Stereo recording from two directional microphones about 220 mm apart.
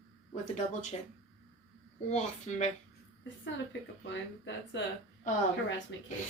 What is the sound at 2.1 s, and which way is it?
Speech, 30° left (ahead or behind).